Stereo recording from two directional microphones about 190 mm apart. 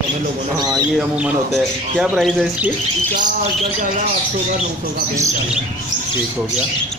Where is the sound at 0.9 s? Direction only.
5° right (ahead or behind).